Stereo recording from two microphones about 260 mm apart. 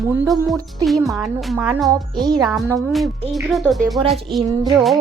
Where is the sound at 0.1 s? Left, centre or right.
Centre.